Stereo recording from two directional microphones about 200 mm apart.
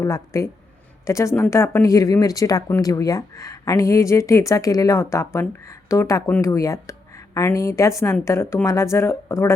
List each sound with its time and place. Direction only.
0.0 s speech: 15° left (ahead or behind)